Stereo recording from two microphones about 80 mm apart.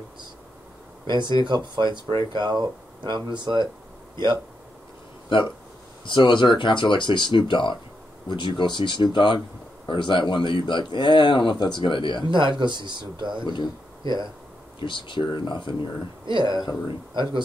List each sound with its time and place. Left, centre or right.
1.0 s speech: right
5.3 s speech: left
9.8 s speech: left
12.3 s speech: right
13.4 s speech: left
14.0 s speech: right
14.8 s speech: left
16.3 s speech: right